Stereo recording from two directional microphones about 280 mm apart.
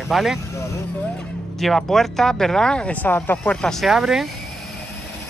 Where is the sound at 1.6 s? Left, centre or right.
Centre.